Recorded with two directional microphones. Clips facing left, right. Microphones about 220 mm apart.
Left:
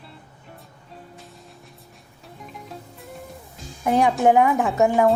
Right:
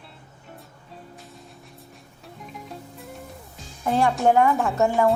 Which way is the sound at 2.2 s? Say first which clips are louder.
Even; centre (ahead or behind).